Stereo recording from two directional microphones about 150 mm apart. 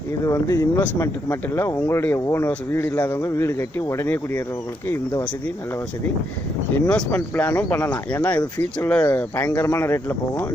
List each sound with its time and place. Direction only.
0.3 s speech: 20° left (ahead or behind)
6.7 s speech: 10° left (ahead or behind)